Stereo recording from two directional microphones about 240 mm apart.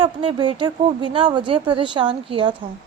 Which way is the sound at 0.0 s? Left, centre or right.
Right.